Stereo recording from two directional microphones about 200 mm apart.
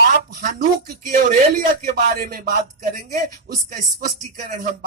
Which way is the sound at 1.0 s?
45° right (ahead or behind).